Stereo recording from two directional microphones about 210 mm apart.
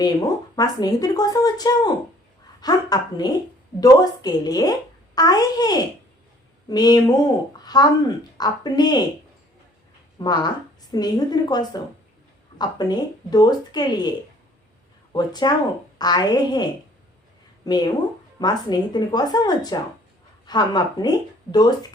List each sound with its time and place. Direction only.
0.0 s a child's voice: 20° left (ahead or behind)
10.2 s a child's voice: 20° left (ahead or behind)
15.1 s a child's voice: 20° left (ahead or behind)
17.7 s a child's voice: 20° left (ahead or behind)